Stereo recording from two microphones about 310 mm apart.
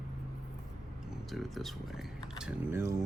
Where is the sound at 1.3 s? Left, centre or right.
Centre.